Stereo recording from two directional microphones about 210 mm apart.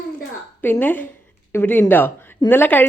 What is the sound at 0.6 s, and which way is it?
A woman's voice, 10° left (ahead or behind).